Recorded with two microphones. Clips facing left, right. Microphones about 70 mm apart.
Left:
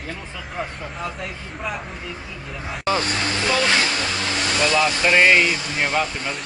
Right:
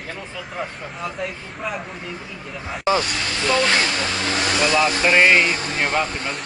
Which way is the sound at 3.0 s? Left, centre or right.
Left.